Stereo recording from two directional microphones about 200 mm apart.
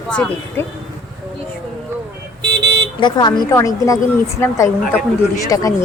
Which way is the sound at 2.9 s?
20° left (ahead or behind).